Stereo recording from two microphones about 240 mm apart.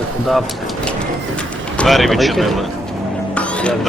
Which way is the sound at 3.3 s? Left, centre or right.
Centre.